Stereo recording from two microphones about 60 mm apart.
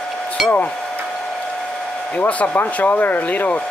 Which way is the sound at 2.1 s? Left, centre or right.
Left.